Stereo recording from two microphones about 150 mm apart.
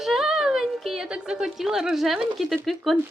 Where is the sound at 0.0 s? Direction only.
5° right (ahead or behind).